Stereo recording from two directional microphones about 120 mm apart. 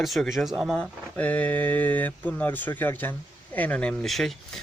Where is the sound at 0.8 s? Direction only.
15° left (ahead or behind).